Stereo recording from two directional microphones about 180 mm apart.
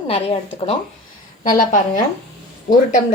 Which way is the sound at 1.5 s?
45° left (ahead or behind).